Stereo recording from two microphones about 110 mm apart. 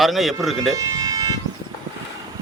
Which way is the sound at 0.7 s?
30° right (ahead or behind).